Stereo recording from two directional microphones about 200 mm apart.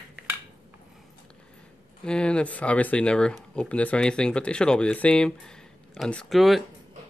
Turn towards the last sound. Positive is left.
turn(degrees=0)  # may be behind; listen again after turning